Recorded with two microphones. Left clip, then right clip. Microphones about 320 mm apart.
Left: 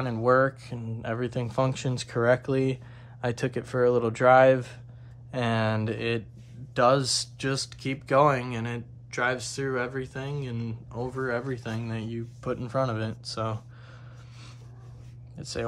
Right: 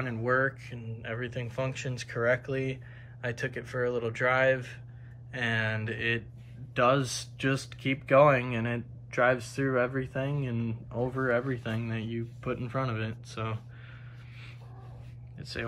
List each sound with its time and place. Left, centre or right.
0.0 s speech: centre
15.3 s speech: centre